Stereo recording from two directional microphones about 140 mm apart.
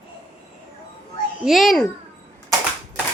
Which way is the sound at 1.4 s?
Centre (ahead or behind).